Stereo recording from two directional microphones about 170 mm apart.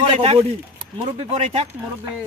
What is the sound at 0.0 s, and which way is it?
Speech, 35° right (ahead or behind).